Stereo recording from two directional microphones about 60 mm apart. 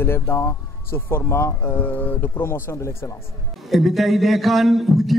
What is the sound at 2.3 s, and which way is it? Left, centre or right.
Speech, left.